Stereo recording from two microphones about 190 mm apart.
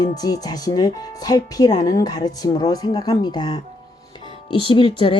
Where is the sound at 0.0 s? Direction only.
20° left (ahead or behind).